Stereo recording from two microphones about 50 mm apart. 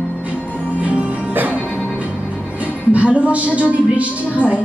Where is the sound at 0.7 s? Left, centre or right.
Right.